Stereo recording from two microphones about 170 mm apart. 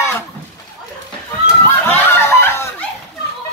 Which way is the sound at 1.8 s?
15° left (ahead or behind).